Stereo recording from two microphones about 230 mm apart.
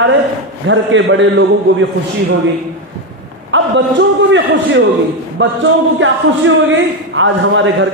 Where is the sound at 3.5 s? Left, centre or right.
Right.